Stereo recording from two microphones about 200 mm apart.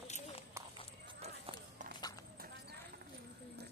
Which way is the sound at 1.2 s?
30° right (ahead or behind).